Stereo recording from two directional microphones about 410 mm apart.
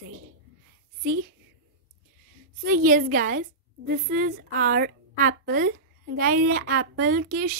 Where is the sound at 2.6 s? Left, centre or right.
Right.